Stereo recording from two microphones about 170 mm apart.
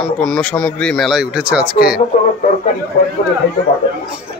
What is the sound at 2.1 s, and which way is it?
Speech, 45° left (ahead or behind).